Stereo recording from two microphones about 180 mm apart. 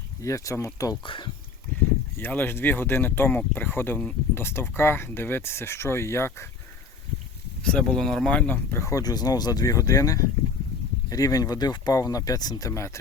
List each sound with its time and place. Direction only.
0.2 s speech: 15° left (ahead or behind)
2.1 s speech: 10° left (ahead or behind)
7.6 s speech: 5° left (ahead or behind)